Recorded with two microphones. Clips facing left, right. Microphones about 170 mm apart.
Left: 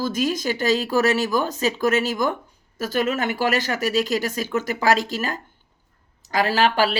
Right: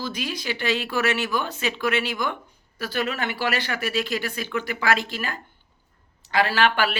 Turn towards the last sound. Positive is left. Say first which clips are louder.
# left 3 dB
turn(degrees=35)  # may be behind; listen again after turning